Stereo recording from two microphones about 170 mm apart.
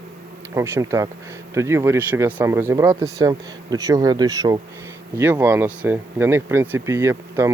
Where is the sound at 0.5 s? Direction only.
15° right (ahead or behind).